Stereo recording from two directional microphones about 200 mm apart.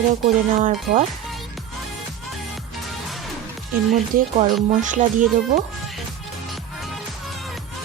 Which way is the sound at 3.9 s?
45° right (ahead or behind).